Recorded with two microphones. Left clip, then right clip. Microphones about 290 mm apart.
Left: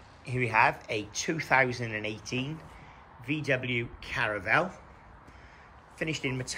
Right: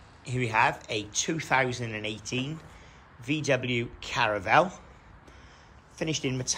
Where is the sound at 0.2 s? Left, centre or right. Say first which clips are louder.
Even; centre.